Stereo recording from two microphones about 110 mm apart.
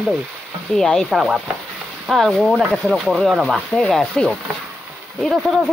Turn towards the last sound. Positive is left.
turn(degrees=0)  # may be behind; listen again after turning